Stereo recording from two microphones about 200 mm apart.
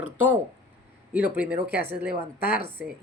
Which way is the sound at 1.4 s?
10° right (ahead or behind).